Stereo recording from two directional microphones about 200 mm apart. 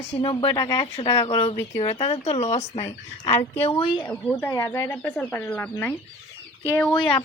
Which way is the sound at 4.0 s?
10° left (ahead or behind).